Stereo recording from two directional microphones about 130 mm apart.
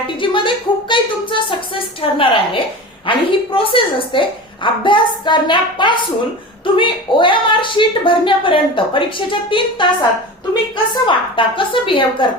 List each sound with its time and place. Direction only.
0.2 s a sound: 40° left (ahead or behind)
3.1 s a woman's voice: 40° left (ahead or behind)
11.0 s a woman's voice: 40° left (ahead or behind)